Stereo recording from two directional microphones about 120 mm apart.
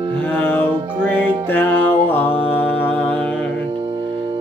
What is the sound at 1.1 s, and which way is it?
Music, 15° left (ahead or behind).